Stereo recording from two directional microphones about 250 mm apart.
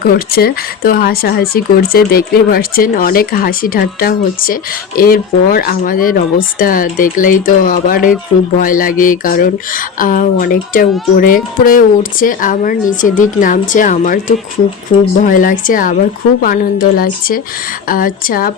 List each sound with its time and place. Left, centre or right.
0.0 s speech: left